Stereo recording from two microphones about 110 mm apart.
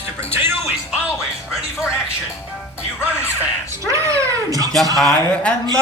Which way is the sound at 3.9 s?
30° right (ahead or behind).